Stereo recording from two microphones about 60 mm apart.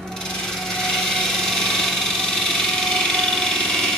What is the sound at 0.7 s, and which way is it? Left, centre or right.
Engine, centre.